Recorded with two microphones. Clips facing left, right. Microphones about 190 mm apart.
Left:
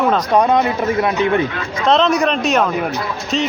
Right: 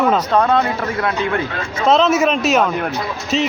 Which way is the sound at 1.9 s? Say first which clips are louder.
Right 1 dB; 5° right (ahead or behind).